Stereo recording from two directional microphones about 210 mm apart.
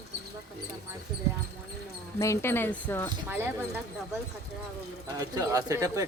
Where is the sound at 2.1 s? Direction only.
15° left (ahead or behind).